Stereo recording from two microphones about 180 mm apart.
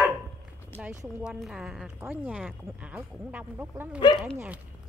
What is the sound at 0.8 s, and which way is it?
Speech, 15° right (ahead or behind).